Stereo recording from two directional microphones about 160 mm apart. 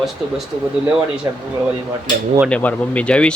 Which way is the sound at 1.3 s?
20° right (ahead or behind).